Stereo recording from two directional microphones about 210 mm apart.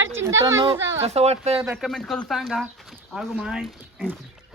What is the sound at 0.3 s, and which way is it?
Speech, 15° right (ahead or behind).